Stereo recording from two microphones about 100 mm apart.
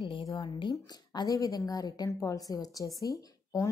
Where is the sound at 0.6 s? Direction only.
45° left (ahead or behind).